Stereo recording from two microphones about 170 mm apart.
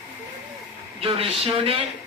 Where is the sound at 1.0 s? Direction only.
35° right (ahead or behind).